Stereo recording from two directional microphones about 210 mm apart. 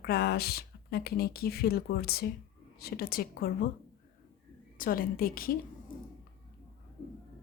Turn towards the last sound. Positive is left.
turn(degrees=45)  # may be behind; listen again after turning